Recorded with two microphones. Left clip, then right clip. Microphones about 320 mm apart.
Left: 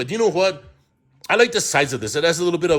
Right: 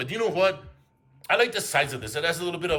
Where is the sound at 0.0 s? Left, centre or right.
Centre.